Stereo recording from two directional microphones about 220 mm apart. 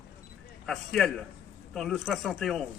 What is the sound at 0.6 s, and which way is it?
A man's voice, centre (ahead or behind).